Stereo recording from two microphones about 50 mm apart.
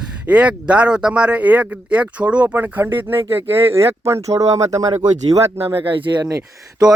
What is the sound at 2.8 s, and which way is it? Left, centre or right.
Speech, right.